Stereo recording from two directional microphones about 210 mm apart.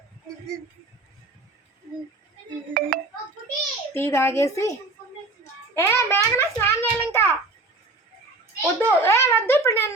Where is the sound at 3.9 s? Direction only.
10° left (ahead or behind).